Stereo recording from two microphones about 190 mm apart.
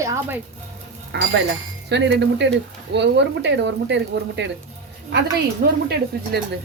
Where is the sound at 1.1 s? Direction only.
65° right (ahead or behind).